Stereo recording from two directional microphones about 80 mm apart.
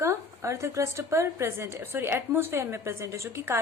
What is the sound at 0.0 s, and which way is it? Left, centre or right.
A woman's voice, right.